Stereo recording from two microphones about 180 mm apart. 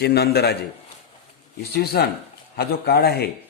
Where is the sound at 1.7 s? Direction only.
60° left (ahead or behind).